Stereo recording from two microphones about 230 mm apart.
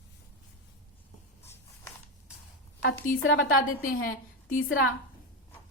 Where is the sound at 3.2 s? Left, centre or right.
Left.